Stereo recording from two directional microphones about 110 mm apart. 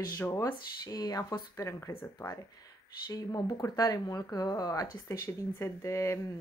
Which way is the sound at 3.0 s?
35° left (ahead or behind).